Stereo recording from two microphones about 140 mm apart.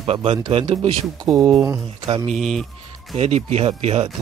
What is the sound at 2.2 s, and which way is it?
Speech, centre (ahead or behind).